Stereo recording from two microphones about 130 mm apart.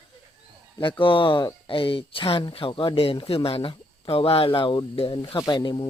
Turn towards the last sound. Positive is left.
turn(degrees=35)  # may be behind; listen again after turning